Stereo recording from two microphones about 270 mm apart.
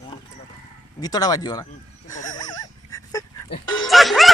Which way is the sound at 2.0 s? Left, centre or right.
Centre.